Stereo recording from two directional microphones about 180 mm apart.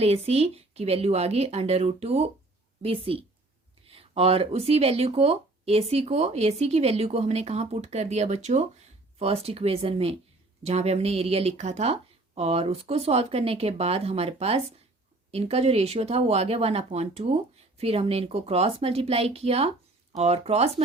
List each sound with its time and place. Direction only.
0.0 s speech: 35° right (ahead or behind)